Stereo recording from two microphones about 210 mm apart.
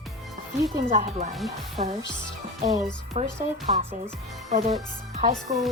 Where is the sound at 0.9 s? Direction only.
30° right (ahead or behind).